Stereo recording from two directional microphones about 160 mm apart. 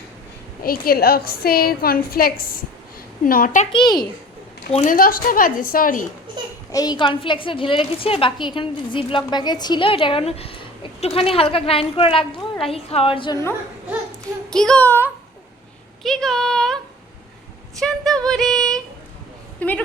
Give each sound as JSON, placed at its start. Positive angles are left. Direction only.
{"t": 0.6, "sound": "a woman's voice", "side_deg": 70}
{"t": 4.9, "sound": "a woman's voice", "side_deg": 65}
{"t": 6.7, "sound": "a woman's voice", "side_deg": 25}
{"t": 14.5, "sound": "child singing", "side_deg": 5}
{"t": 16.0, "sound": "a sound", "side_deg": 0}
{"t": 19.5, "sound": "a woman's voice", "side_deg": 10}